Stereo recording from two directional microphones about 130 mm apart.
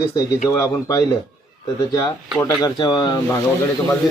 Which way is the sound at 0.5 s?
25° left (ahead or behind).